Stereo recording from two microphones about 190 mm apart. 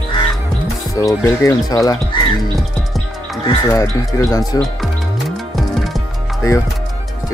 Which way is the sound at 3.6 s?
15° left (ahead or behind).